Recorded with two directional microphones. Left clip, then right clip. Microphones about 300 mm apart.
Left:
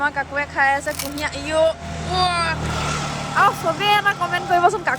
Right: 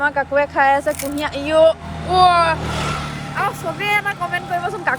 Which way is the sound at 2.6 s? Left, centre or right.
Right.